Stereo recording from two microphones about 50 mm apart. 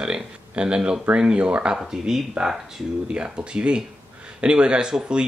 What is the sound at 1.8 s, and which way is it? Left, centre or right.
Speech, centre.